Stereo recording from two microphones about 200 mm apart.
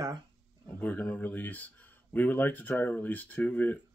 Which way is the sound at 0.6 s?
10° left (ahead or behind).